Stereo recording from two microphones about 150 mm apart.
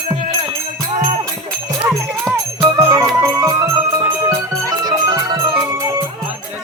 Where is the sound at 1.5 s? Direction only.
Centre (ahead or behind).